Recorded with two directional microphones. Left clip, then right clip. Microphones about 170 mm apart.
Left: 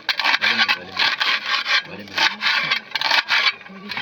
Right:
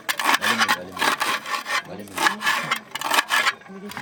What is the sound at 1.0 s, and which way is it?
Wood, 15° right (ahead or behind).